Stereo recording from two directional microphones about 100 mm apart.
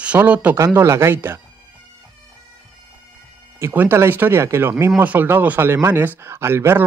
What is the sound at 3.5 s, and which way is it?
Speech, 25° right (ahead or behind).